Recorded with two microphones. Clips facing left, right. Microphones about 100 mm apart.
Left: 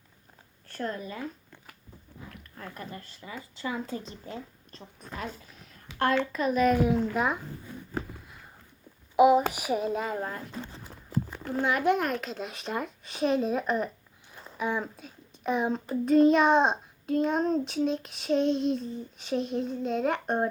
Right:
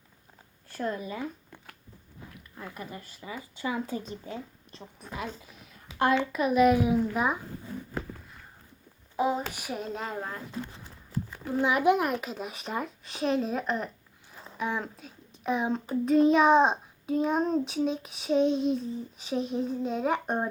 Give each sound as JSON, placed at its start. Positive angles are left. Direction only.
{"t": 0.7, "sound": "speech", "side_deg": -10}
{"t": 5.0, "sound": "a child's voice", "side_deg": -10}
{"t": 9.1, "sound": "a child's voice", "side_deg": 10}
{"t": 11.6, "sound": "a child's voice", "side_deg": -10}